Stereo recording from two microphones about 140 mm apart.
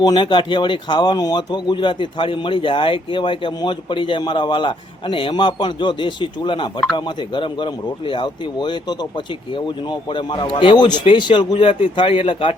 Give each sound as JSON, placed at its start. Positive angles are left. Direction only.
{"t": 0.0, "sound": "speech", "side_deg": 35}